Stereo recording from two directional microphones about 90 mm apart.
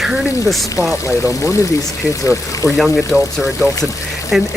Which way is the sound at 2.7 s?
Centre (ahead or behind).